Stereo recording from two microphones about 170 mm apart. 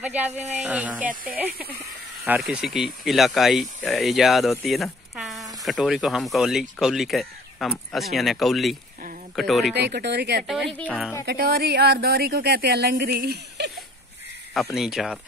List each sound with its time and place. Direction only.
0.0 s speech: 10° right (ahead or behind)
2.2 s speech: 10° right (ahead or behind)
9.8 s speech: 80° right
10.7 s speech: 10° left (ahead or behind)
11.2 s speech: 65° right (ahead or behind)
14.5 s speech: centre (ahead or behind)